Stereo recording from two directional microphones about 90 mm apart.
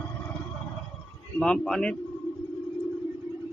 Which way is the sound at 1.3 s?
10° left (ahead or behind).